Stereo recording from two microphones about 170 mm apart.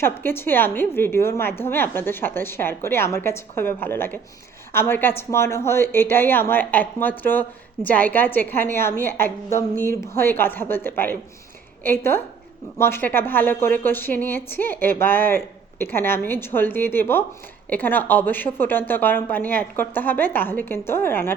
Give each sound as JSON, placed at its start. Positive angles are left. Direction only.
{"t": 0.0, "sound": "a woman's voice", "side_deg": 15}
{"t": 9.7, "sound": "speech", "side_deg": -55}
{"t": 10.2, "sound": "a woman's voice", "side_deg": 15}